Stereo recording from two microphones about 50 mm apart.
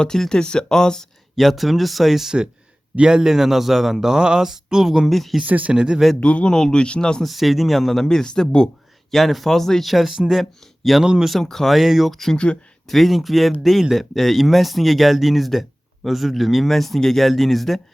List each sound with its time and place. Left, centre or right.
0.0 s a man's voice: centre
1.4 s speech: centre
2.9 s a man's voice: centre
5.1 s speech: centre
5.4 s speech: right
5.7 s a man's voice: centre
6.1 s a man's voice: left
7.3 s speech: centre
9.1 s a man's voice: centre
11.4 s speech: centre